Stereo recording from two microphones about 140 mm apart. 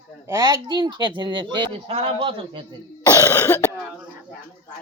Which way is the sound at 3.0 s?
25° left (ahead or behind).